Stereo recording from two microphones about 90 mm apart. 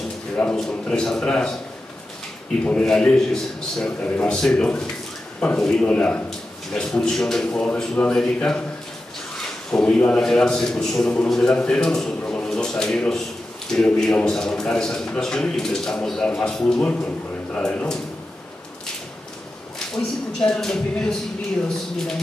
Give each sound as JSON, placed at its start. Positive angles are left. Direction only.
{"t": 0.6, "sound": "a man's voice", "side_deg": 10}
{"t": 2.6, "sound": "a man's voice", "side_deg": 10}
{"t": 9.7, "sound": "a man's voice", "side_deg": 15}
{"t": 12.2, "sound": "a sound", "side_deg": 15}
{"t": 13.7, "sound": "a man's voice", "side_deg": 5}
{"t": 20.0, "sound": "a man's voice", "side_deg": 5}